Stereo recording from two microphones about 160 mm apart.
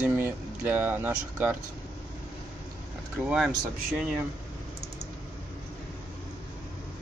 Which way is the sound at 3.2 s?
5° right (ahead or behind).